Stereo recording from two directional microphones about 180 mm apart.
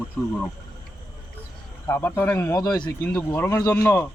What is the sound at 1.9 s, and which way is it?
Speech, 15° left (ahead or behind).